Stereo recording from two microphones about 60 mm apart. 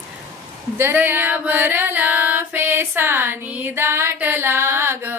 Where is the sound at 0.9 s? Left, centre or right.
Right.